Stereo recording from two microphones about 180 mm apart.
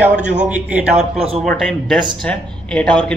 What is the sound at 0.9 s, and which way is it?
Speech, 35° right (ahead or behind).